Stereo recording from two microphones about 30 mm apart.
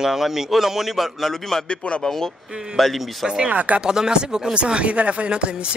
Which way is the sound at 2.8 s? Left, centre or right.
Centre.